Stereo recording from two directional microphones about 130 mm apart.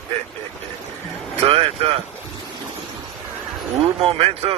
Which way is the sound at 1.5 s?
50° right (ahead or behind).